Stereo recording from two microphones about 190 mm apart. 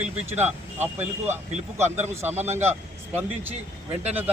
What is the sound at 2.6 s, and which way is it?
Speech, 10° right (ahead or behind).